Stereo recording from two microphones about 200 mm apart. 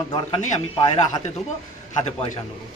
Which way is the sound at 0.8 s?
20° left (ahead or behind).